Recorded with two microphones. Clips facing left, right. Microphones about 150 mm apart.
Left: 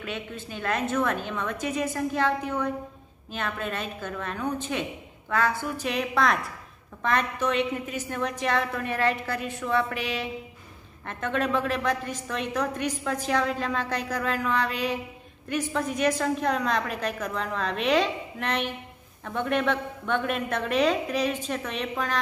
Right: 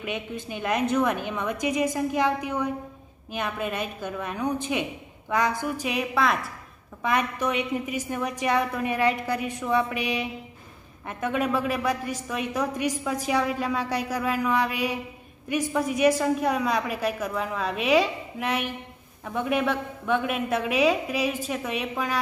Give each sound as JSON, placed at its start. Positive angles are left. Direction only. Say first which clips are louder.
{"t": 0.0, "sound": "a woman's voice", "louder": "right 3 dB", "side_deg": -15}